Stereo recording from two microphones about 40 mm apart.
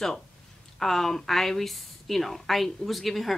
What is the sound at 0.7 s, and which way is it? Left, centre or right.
A woman's voice, centre.